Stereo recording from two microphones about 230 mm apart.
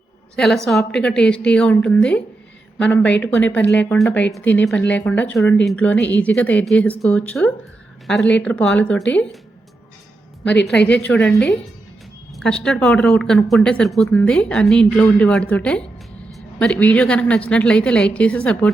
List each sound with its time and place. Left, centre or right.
0.3 s speech: centre
10.7 s speech: centre
12.4 s speech: centre